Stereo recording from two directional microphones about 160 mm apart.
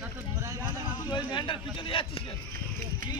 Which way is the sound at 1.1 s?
30° left (ahead or behind).